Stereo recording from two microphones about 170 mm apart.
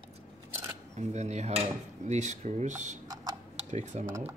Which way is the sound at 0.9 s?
40° right (ahead or behind).